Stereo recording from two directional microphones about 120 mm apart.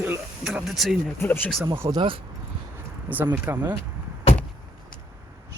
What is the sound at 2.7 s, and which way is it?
Speech, 15° right (ahead or behind).